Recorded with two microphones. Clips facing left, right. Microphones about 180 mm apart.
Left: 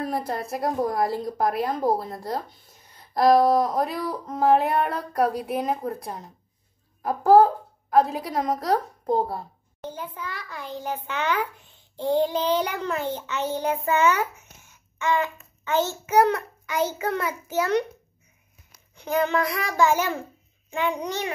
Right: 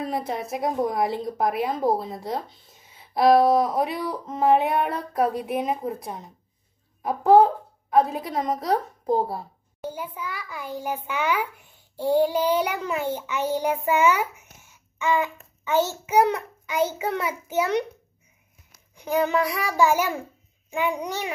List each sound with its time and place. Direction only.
0.0 s a woman's voice: centre (ahead or behind)
12.0 s child singing: 10° right (ahead or behind)
16.1 s a child's voice: 15° right (ahead or behind)
18.9 s a child's voice: 10° right (ahead or behind)